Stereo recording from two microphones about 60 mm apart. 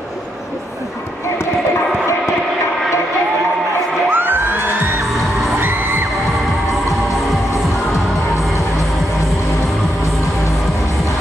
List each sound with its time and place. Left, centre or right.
4.1 s music: right
5.6 s music: right